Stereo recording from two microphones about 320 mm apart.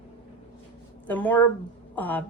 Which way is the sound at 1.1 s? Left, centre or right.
Centre.